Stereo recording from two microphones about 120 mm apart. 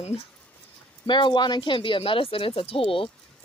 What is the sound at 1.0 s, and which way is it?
Speech, 40° left (ahead or behind).